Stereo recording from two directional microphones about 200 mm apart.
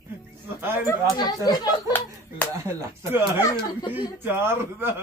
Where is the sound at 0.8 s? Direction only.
20° left (ahead or behind).